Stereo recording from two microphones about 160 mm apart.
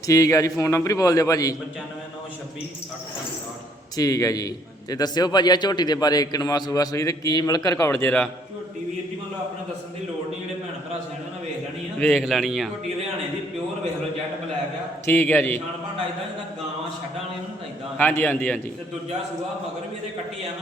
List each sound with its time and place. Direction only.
0.1 s a man's voice: 20° left (ahead or behind)
3.9 s a man's voice: 20° left (ahead or behind)
11.9 s speech: 5° left (ahead or behind)
15.0 s a man's voice: 10° left (ahead or behind)
17.9 s a man's voice: 10° left (ahead or behind)